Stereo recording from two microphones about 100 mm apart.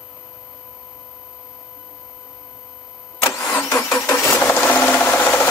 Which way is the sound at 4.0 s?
30° left (ahead or behind).